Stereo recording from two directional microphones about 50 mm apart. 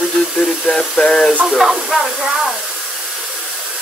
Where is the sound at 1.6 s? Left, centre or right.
Centre.